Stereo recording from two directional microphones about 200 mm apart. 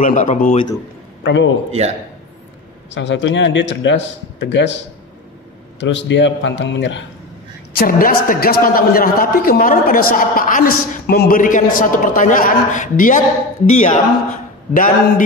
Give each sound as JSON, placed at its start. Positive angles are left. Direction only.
{"t": 0.0, "sound": "a man's voice", "side_deg": 40}
{"t": 1.2, "sound": "a man's voice", "side_deg": 70}
{"t": 1.7, "sound": "a man's voice", "side_deg": -35}
{"t": 2.9, "sound": "a man's voice", "side_deg": 65}
{"t": 5.8, "sound": "a man's voice", "side_deg": 65}
{"t": 7.7, "sound": "a man's voice", "side_deg": 50}